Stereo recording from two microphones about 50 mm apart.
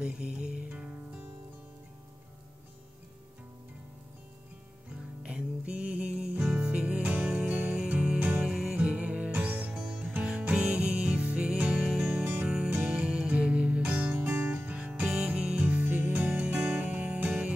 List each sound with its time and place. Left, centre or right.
0.0 s music: right
5.2 s music: right
7.2 s music: centre
8.5 s music: centre
8.7 s music: right
10.5 s music: centre
11.7 s music: centre
12.1 s music: right
14.1 s music: right
14.5 s guitar: right
15.0 s music: centre